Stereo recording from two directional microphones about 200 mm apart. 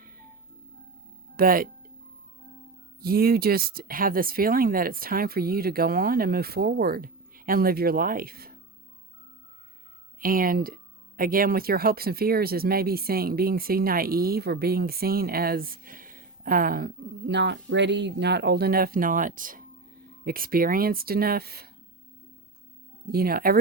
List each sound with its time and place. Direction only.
1.4 s speech: 45° right (ahead or behind)
3.0 s speech: 50° right (ahead or behind)
10.2 s speech: 45° right (ahead or behind)
23.1 s speech: 50° right (ahead or behind)